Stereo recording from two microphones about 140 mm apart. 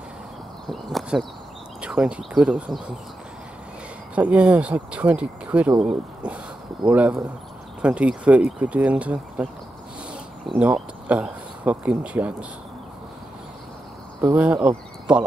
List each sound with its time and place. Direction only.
0.7 s speech: centre (ahead or behind)
4.1 s speech: 10° right (ahead or behind)
10.5 s speech: 10° right (ahead or behind)
14.2 s speech: 10° right (ahead or behind)